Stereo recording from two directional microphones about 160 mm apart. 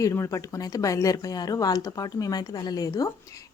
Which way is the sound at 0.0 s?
20° left (ahead or behind).